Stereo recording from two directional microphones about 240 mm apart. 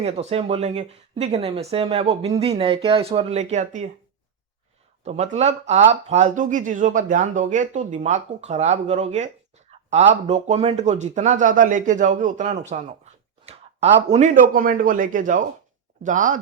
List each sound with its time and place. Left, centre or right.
0.0 s speech: right
5.0 s speech: right